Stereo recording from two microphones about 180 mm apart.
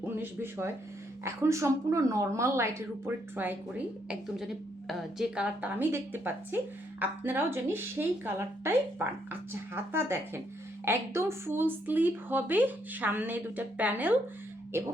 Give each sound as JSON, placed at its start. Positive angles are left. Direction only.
{"t": 0.0, "sound": "a woman's voice", "side_deg": -10}
{"t": 4.1, "sound": "a woman's voice", "side_deg": 0}